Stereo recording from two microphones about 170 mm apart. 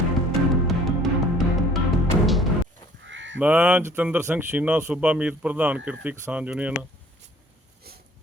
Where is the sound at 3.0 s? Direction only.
90° right.